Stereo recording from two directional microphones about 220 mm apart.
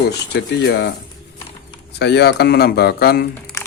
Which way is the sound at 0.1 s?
50° left (ahead or behind).